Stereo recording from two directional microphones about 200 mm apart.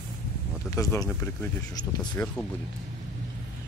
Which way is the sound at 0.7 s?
15° left (ahead or behind).